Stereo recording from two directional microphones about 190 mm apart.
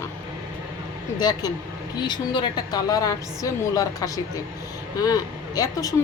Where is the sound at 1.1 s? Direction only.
20° left (ahead or behind).